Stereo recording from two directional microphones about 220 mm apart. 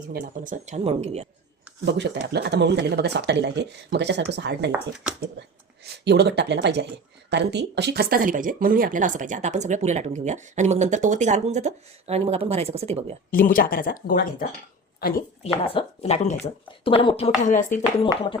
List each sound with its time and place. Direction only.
0.1 s speech: 40° right (ahead or behind)
1.8 s speech: 50° right (ahead or behind); by 13.1 s 30° right (ahead or behind)
13.3 s speech: 40° left (ahead or behind)
15.6 s a woman's voice: 25° left (ahead or behind)